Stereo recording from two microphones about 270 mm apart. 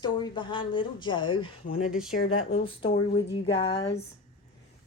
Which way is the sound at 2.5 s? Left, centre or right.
Left.